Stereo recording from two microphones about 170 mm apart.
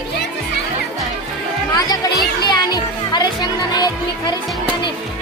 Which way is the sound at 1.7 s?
20° left (ahead or behind).